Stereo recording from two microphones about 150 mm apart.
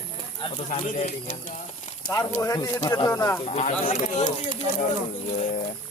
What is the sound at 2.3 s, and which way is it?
Speech, 20° left (ahead or behind).